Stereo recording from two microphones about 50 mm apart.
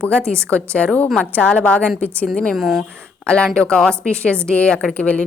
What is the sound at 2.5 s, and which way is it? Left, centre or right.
Speech, centre.